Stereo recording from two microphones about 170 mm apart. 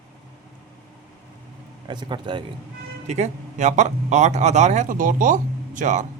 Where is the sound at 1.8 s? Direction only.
25° right (ahead or behind).